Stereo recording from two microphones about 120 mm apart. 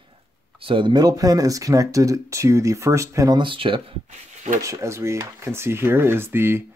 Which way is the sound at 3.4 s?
45° right (ahead or behind).